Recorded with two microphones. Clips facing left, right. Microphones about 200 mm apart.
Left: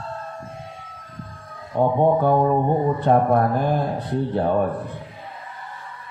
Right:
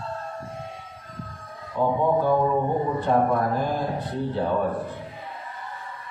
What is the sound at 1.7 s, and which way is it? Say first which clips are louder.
A man's voice: left 4 dB; 55° left (ahead or behind).